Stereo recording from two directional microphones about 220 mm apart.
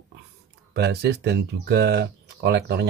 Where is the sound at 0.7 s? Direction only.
50° right (ahead or behind).